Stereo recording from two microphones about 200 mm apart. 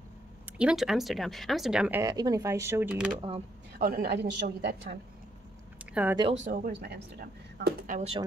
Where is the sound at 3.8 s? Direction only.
50° right (ahead or behind).